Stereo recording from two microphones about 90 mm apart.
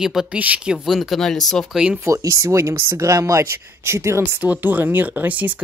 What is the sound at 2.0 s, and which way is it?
Speech, 35° right (ahead or behind).